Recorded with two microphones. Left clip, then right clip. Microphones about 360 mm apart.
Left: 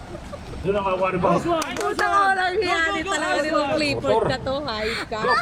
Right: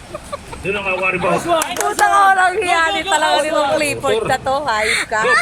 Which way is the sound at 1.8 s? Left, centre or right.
Centre.